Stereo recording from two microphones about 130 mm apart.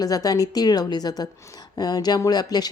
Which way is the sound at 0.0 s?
30° left (ahead or behind).